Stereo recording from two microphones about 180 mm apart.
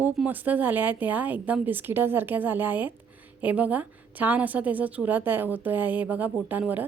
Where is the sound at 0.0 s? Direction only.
5° right (ahead or behind).